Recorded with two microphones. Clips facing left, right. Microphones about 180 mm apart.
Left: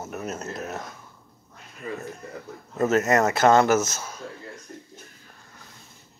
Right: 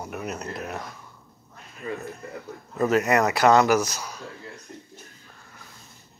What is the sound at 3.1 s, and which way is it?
Speech, 40° left (ahead or behind).